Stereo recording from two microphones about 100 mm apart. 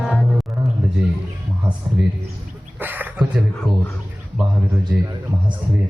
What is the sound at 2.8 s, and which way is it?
Speech, 20° right (ahead or behind).